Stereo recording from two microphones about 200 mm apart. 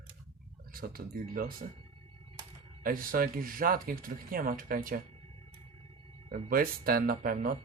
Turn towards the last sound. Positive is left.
turn(degrees=-45)  # may be behind; listen again after turning